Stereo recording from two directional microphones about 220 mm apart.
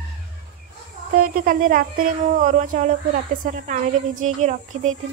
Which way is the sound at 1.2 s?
40° right (ahead or behind).